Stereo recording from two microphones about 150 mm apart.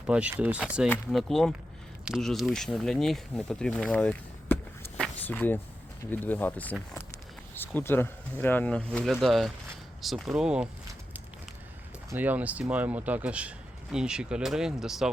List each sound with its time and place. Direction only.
0.1 s speech: 10° right (ahead or behind)
1.1 s speech: centre (ahead or behind)
12.1 s speech: 10° right (ahead or behind)